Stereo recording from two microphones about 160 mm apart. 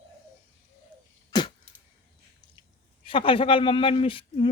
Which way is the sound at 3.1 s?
35° left (ahead or behind).